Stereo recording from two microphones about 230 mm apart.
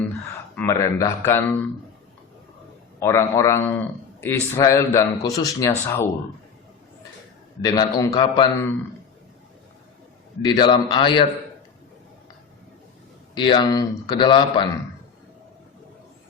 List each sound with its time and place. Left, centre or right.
0.5 s a man's voice: centre
3.0 s a man's voice: centre
7.6 s a man's voice: centre
10.4 s a man's voice: centre
13.3 s a man's voice: centre